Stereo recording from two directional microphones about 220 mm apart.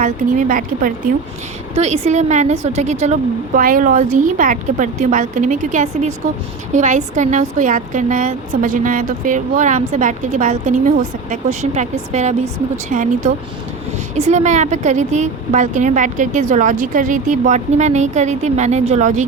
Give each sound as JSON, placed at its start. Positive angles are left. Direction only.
{"t": 0.0, "sound": "a woman's voice", "side_deg": -35}